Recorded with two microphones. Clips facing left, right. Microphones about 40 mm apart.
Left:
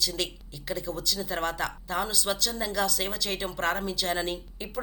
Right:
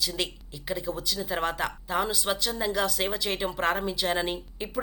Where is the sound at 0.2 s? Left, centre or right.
Centre.